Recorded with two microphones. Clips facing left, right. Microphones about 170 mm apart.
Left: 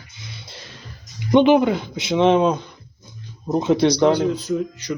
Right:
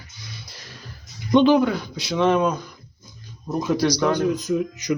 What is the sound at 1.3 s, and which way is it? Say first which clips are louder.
Speech: left 2 dB; 20° left (ahead or behind).